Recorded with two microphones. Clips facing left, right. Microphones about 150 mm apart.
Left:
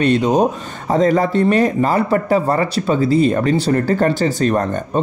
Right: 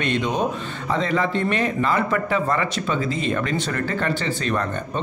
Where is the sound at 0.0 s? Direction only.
35° left (ahead or behind).